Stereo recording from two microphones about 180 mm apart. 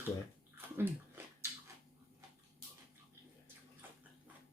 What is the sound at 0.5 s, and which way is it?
Bathtub, 15° right (ahead or behind).